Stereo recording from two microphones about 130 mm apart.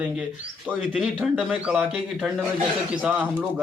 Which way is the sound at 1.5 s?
10° right (ahead or behind).